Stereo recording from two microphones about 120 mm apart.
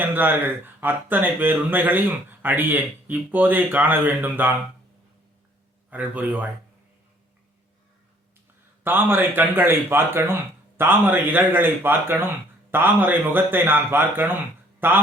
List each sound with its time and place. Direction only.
0.0 s speech: 15° right (ahead or behind)
5.9 s speech: 15° right (ahead or behind)
8.8 s speech: 15° right (ahead or behind)